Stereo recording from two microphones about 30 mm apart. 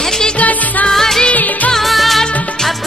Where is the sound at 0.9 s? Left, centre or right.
Centre.